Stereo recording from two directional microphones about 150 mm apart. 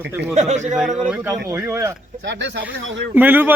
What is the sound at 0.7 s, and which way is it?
Speech, centre (ahead or behind).